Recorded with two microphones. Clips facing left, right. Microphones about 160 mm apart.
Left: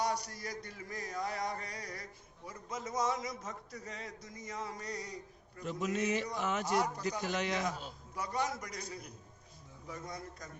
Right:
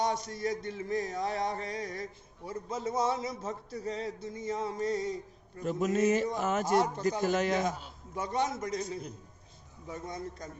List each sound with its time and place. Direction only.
0.0 s a man's voice: 25° right (ahead or behind)
5.5 s a man's voice: 45° right (ahead or behind)
6.7 s a man's voice: 25° right (ahead or behind)
7.2 s a man's voice: 45° right (ahead or behind)
7.6 s a man's voice: 25° right (ahead or behind)